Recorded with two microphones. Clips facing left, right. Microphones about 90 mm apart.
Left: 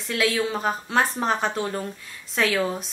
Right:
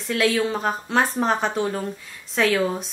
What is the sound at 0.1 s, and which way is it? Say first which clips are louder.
Speech: right 3 dB; centre (ahead or behind).